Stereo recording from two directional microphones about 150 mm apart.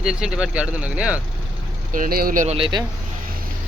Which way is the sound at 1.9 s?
75° right (ahead or behind).